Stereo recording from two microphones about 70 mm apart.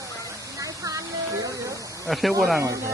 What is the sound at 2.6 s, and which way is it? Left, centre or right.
Speech, right.